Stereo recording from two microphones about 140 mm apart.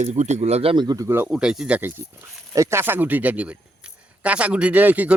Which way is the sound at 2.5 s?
20° right (ahead or behind).